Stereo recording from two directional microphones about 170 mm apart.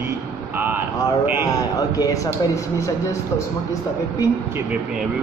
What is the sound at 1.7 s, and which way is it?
Speech, 20° left (ahead or behind).